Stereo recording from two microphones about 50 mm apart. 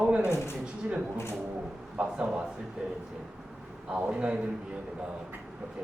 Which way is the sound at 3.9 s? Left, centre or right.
Right.